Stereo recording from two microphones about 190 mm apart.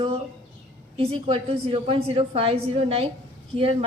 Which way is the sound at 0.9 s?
30° right (ahead or behind).